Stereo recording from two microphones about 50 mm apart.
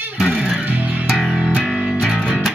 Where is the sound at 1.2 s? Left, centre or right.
Centre.